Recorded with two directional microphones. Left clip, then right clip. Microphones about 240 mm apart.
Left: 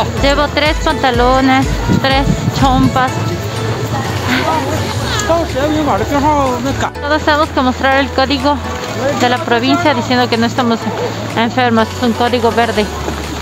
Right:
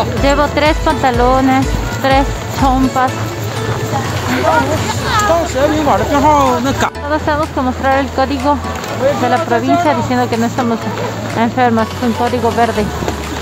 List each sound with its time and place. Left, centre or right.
0.2 s speech: centre
5.9 s speech: right
7.1 s speech: centre